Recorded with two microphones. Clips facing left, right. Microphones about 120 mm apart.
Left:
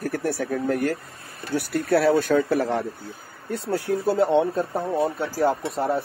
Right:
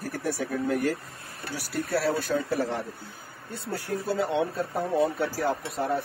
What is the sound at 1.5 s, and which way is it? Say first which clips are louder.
Speech: left 8 dB; 65° left (ahead or behind).